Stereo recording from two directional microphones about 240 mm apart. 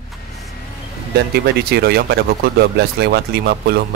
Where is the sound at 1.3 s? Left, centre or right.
Right.